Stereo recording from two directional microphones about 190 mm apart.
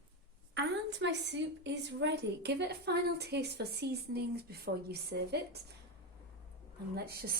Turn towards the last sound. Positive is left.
turn(degrees=-55)  # may be behind; listen again after turning